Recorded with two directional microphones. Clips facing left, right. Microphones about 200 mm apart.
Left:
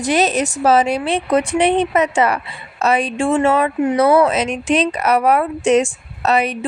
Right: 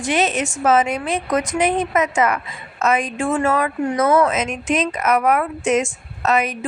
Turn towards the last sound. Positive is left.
turn(degrees=30)  # may be behind; listen again after turning